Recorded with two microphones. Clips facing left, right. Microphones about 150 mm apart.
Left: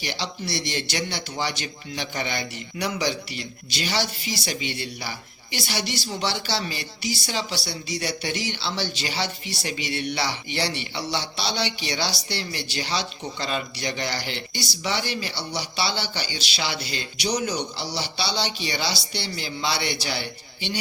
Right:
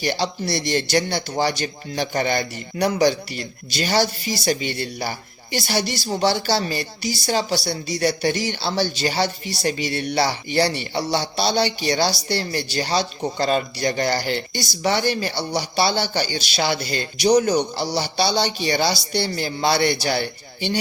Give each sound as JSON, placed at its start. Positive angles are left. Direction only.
{"t": 0.0, "sound": "speech", "side_deg": -45}